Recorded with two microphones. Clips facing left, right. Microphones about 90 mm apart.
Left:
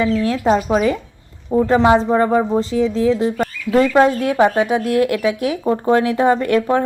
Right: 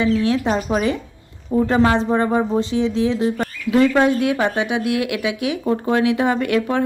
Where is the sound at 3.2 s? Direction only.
35° left (ahead or behind).